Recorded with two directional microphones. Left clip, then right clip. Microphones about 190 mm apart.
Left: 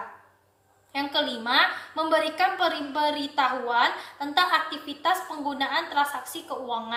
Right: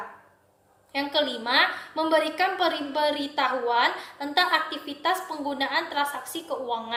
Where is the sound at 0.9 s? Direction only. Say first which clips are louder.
Right 1 dB; 5° left (ahead or behind).